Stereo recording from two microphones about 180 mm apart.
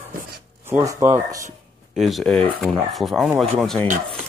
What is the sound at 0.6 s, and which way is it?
Speech, 15° right (ahead or behind).